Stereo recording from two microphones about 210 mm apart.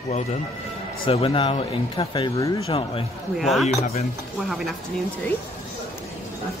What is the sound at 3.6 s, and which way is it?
Speech, 30° left (ahead or behind).